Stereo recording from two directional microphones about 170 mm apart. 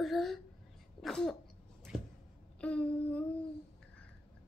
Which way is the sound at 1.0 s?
Centre (ahead or behind).